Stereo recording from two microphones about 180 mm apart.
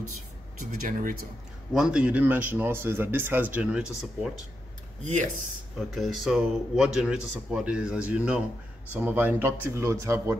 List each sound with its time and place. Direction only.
0.6 s speech: 45° right (ahead or behind)
1.7 s speech: 5° right (ahead or behind)
5.0 s speech: 40° right (ahead or behind)
5.9 s speech: centre (ahead or behind)